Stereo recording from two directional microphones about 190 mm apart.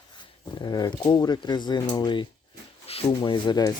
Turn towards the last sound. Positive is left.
turn(degrees=20)  # may be behind; listen again after turning